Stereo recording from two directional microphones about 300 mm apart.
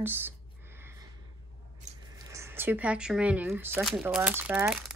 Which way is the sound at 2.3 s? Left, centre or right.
Centre.